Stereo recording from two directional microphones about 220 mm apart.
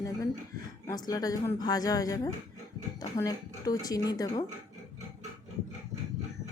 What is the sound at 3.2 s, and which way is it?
Speech, 15° left (ahead or behind).